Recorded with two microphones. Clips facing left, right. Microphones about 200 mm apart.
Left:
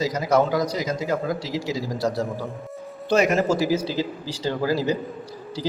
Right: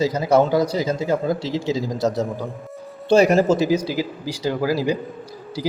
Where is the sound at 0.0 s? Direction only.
30° right (ahead or behind).